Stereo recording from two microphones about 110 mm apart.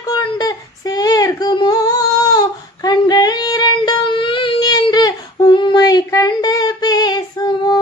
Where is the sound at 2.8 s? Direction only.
40° left (ahead or behind).